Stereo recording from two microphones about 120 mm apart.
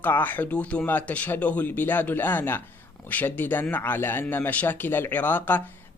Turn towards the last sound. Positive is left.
turn(degrees=15)  # may be behind; listen again after turning